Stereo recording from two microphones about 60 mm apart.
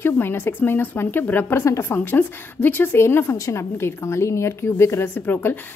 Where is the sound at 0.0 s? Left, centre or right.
Left.